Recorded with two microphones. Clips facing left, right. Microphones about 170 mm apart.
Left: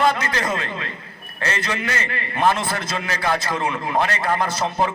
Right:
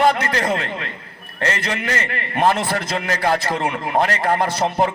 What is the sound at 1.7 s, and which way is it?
A man's voice, 50° right (ahead or behind).